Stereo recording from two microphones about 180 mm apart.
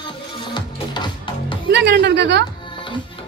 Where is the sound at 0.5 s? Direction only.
25° left (ahead or behind).